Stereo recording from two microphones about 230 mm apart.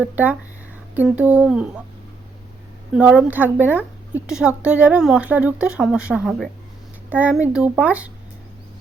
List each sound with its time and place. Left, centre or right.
0.0 s speech: centre
2.9 s a woman's voice: centre